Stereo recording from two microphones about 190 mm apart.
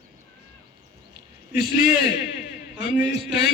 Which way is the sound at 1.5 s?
55° left (ahead or behind).